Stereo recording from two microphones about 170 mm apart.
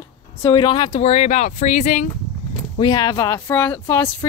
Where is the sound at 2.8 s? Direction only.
20° left (ahead or behind).